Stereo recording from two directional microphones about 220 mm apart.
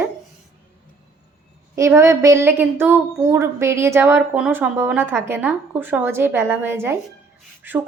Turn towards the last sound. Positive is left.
turn(degrees=-10)  # may be behind; listen again after turning